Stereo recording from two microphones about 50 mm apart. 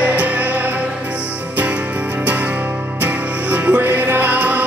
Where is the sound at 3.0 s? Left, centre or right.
Right.